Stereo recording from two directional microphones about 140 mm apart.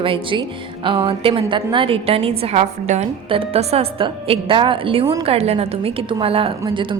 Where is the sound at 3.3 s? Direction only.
45° right (ahead or behind).